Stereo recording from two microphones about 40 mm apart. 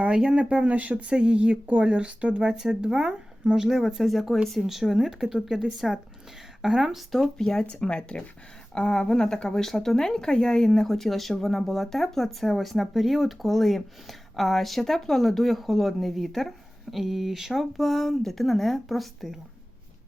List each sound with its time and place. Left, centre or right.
0.0 s speech: right
1.1 s speech: right
2.5 s speech: centre
7.1 s a woman's voice: centre
7.4 s a woman's voice: left; by 19.4 s centre